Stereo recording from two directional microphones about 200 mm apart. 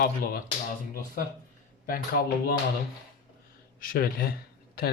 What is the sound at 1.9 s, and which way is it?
Speech, 50° left (ahead or behind).